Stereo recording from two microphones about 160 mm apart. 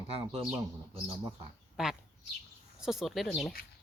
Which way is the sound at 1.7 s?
5° right (ahead or behind).